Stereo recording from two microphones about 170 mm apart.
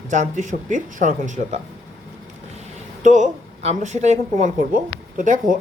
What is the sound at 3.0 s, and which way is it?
Speech, 45° right (ahead or behind).